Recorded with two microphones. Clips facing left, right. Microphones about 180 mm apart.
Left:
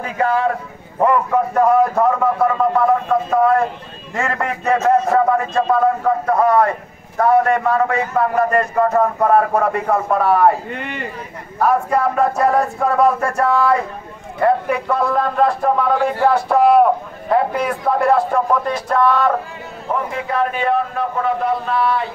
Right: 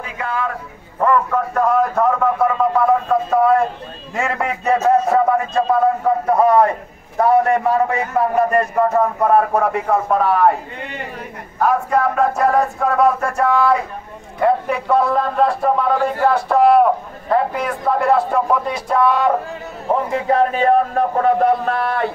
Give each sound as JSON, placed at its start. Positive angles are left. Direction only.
{"t": 0.0, "sound": "a man's voice", "side_deg": 40}
{"t": 0.9, "sound": "a man's voice", "side_deg": 15}
{"t": 8.7, "sound": "a man's voice", "side_deg": 0}
{"t": 10.2, "sound": "a man's voice", "side_deg": 5}
{"t": 10.7, "sound": "speech", "side_deg": 65}
{"t": 11.6, "sound": "a man's voice", "side_deg": 5}
{"t": 19.9, "sound": "a man's voice", "side_deg": -35}